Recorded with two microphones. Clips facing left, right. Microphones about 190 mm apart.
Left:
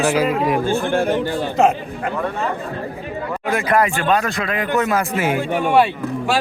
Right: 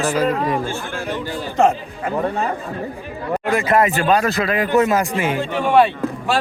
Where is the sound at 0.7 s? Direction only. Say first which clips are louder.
Left 8 dB; 55° left (ahead or behind).